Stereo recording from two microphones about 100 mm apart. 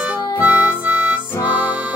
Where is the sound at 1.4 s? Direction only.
15° right (ahead or behind).